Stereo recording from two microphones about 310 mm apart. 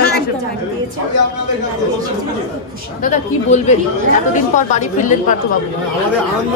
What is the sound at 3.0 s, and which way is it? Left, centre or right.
Speech, left.